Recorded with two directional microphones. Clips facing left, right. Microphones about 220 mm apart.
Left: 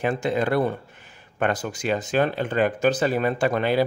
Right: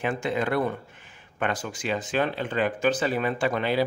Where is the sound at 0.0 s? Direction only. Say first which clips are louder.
Left 3 dB; 35° left (ahead or behind).